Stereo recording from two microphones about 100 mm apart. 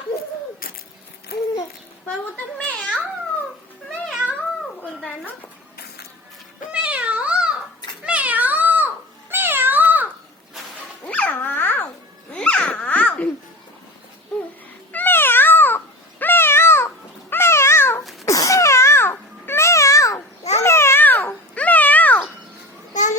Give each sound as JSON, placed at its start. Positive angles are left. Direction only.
{"t": 2.3, "sound": "a sound", "side_deg": 15}
{"t": 3.8, "sound": "cat", "side_deg": 5}
{"t": 6.7, "sound": "cat", "side_deg": -10}
{"t": 11.0, "sound": "babbling", "side_deg": 15}
{"t": 14.9, "sound": "cat", "side_deg": 20}
{"t": 18.3, "sound": "babbling", "side_deg": 30}